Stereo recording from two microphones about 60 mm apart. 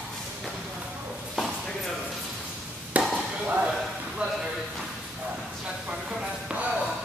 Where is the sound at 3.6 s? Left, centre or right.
Centre.